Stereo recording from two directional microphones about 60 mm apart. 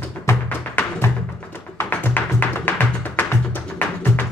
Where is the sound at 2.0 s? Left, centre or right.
Left.